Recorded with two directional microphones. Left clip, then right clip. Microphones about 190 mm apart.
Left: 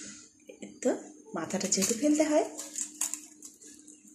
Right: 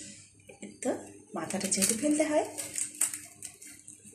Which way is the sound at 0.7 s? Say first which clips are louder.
Left 3 dB; 20° left (ahead or behind).